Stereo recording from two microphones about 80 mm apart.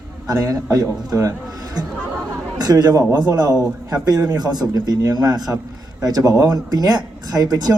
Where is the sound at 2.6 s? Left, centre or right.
Right.